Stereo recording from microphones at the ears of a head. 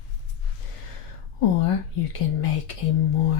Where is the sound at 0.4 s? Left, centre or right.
Left.